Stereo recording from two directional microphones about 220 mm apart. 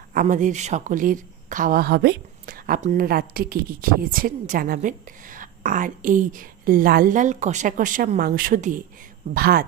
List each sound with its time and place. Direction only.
0.1 s speech: 35° right (ahead or behind)